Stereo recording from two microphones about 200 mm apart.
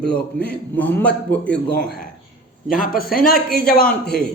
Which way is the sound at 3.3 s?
5° left (ahead or behind).